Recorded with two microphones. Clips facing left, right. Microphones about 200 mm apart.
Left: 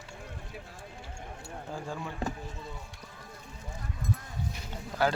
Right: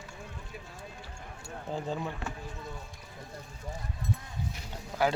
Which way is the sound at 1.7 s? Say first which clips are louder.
Right 4 dB; 20° right (ahead or behind).